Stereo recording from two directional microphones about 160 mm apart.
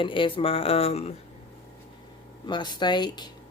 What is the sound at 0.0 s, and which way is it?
Speech, 30° left (ahead or behind).